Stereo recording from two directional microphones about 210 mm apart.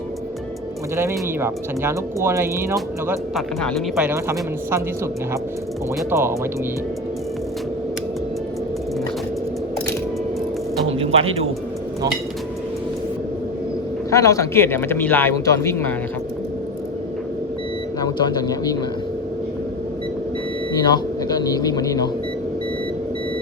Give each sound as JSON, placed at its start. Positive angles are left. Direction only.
{"t": 0.9, "sound": "speech", "side_deg": -10}
{"t": 3.1, "sound": "speech", "side_deg": 0}
{"t": 6.0, "sound": "speech", "side_deg": -10}
{"t": 10.9, "sound": "music", "side_deg": -25}
{"t": 14.1, "sound": "speech", "side_deg": 15}
{"t": 18.0, "sound": "speech", "side_deg": 20}
{"t": 20.7, "sound": "speech", "side_deg": 20}